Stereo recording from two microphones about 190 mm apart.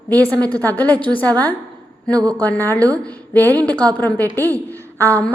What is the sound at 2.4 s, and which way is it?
A woman's voice, 10° left (ahead or behind).